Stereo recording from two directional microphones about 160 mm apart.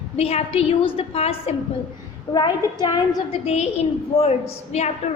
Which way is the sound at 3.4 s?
40° left (ahead or behind).